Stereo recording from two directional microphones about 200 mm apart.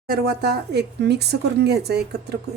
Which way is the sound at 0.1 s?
55° right (ahead or behind).